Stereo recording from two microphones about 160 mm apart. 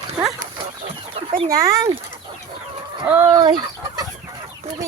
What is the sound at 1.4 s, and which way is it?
Speech, 20° right (ahead or behind).